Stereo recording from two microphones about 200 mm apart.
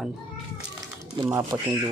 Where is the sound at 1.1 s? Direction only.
15° right (ahead or behind).